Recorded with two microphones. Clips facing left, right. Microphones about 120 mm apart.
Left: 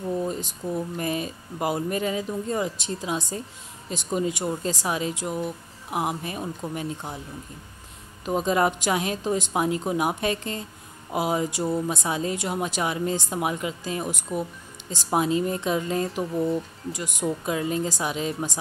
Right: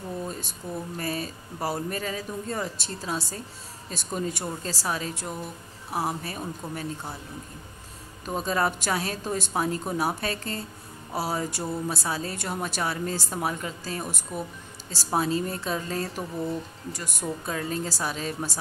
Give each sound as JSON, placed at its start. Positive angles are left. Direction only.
{"t": 0.2, "sound": "a woman's voice", "side_deg": 15}
{"t": 8.3, "sound": "a woman's voice", "side_deg": 15}
{"t": 16.2, "sound": "music", "side_deg": 5}
{"t": 16.9, "sound": "a woman's voice", "side_deg": 15}